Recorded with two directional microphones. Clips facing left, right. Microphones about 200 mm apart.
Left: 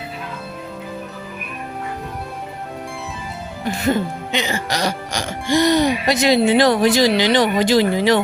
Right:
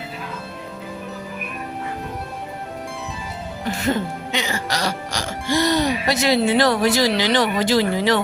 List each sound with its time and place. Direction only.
3.8 s speech: 20° left (ahead or behind)